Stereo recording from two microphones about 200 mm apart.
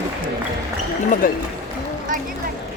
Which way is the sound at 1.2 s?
45° left (ahead or behind).